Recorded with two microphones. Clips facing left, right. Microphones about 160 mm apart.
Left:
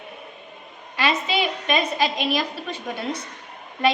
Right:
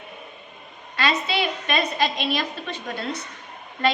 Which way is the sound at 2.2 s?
10° left (ahead or behind).